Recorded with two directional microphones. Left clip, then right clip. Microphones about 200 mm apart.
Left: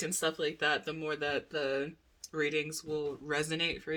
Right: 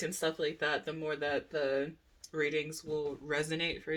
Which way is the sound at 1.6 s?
15° left (ahead or behind).